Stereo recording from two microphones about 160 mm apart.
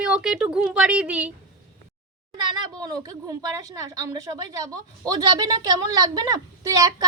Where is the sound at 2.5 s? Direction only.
25° right (ahead or behind).